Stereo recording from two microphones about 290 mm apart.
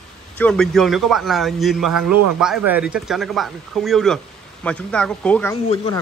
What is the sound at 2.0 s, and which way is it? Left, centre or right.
Speech, right.